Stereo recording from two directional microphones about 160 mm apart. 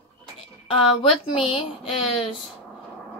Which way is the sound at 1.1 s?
35° left (ahead or behind).